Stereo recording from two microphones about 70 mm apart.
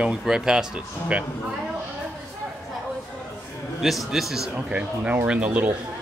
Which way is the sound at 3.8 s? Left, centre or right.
Centre.